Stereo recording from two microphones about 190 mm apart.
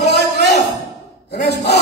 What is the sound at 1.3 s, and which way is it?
Speech, 60° left (ahead or behind).